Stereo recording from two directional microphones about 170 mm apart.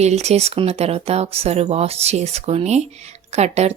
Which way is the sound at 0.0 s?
40° right (ahead or behind).